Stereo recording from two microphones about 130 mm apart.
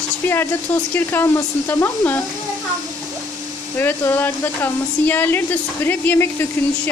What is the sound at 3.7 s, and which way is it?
Speech, 15° left (ahead or behind).